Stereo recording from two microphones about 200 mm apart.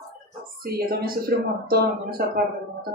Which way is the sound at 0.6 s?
50° right (ahead or behind).